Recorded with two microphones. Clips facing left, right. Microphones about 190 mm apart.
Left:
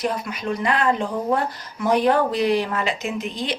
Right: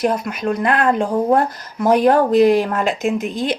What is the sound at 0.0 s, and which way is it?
Speech, 50° right (ahead or behind).